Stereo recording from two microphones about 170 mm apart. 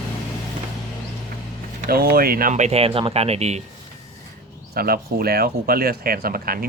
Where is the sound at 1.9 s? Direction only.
60° right (ahead or behind); by 3.6 s 40° right (ahead or behind).